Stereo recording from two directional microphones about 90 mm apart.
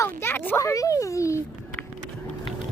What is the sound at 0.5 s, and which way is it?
Speech, 35° left (ahead or behind).